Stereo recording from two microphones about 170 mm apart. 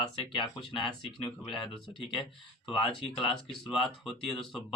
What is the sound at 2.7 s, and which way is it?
Speech, 30° left (ahead or behind).